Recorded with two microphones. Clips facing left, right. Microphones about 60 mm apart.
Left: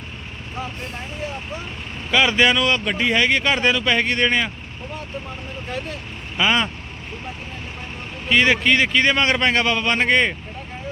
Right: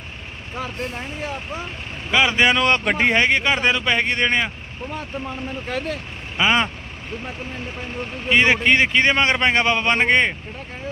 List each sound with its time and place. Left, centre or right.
2.0 s speech: centre
2.6 s speech: right
3.2 s speech: right
6.3 s speech: centre
8.3 s speech: right